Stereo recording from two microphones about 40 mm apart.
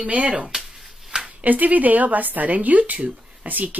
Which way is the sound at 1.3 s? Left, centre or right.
Right.